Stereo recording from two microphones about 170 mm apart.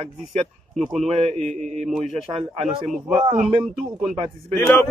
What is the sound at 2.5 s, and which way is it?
Speech, 40° right (ahead or behind).